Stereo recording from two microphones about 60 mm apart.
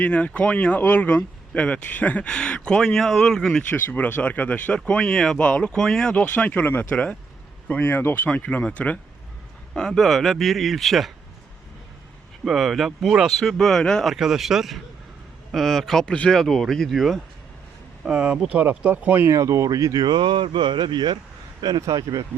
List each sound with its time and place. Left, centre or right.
0.0 s speech: left
2.3 s speech: centre
3.7 s speech: left
5.7 s speech: centre
6.1 s speech: left
6.9 s speech: left
7.7 s speech: left
8.4 s speech: left
9.7 s speech: centre
12.5 s speech: centre
14.1 s speech: centre
18.1 s speech: centre
19.3 s speech: right
21.7 s speech: right